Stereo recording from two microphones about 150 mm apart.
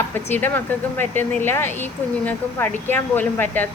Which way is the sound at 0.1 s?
15° left (ahead or behind).